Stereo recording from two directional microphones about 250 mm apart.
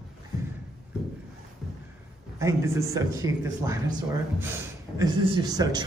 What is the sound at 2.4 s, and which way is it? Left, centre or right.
A man's voice, centre.